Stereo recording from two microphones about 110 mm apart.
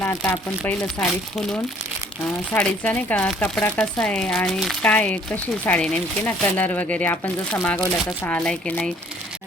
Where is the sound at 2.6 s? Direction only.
10° left (ahead or behind).